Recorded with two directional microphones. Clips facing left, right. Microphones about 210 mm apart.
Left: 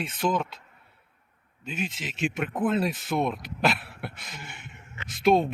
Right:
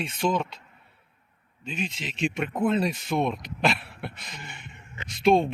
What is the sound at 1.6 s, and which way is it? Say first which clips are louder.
Speech: even; 5° left (ahead or behind).